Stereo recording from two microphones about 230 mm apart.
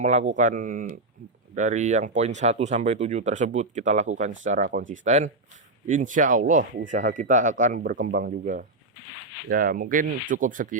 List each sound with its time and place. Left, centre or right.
0.0 s speech: right